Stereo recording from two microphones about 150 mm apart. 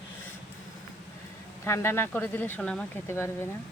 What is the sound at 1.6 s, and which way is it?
Speech, 15° left (ahead or behind).